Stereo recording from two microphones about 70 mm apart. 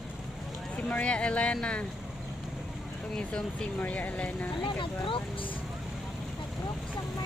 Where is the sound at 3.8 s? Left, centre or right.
Left.